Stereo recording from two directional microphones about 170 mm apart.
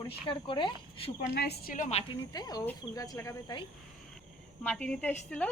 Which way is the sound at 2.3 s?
20° left (ahead or behind).